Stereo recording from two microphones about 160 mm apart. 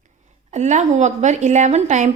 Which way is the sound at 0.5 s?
45° right (ahead or behind).